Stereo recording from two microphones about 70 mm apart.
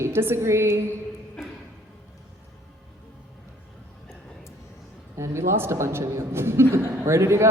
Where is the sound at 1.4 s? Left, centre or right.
Centre.